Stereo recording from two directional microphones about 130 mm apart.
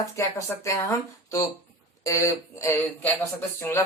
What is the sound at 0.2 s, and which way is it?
Speech, 25° left (ahead or behind).